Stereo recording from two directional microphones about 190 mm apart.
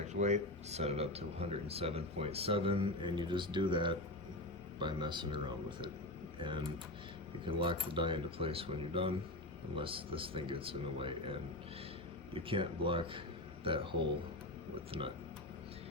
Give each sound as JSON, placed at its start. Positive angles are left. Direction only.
{"t": 0.1, "sound": "speech", "side_deg": -40}
{"t": 7.4, "sound": "speech", "side_deg": -25}